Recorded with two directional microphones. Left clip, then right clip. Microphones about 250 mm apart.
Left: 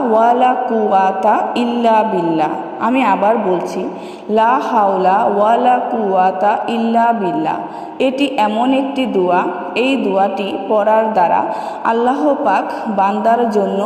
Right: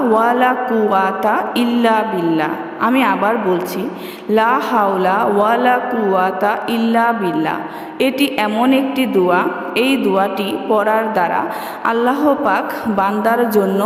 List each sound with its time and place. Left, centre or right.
0.1 s a woman's voice: centre